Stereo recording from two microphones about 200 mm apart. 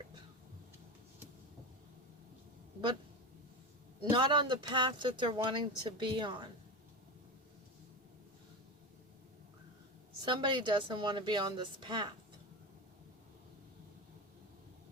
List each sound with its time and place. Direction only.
4.1 s a woman's voice: 25° right (ahead or behind)
10.2 s a woman's voice: 25° right (ahead or behind)